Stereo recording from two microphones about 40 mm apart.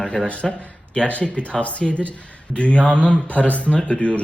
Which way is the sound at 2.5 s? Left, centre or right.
Left.